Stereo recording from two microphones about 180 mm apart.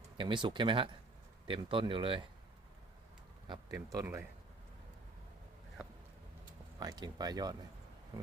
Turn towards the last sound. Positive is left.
turn(degrees=-20)  # may be behind; listen again after turning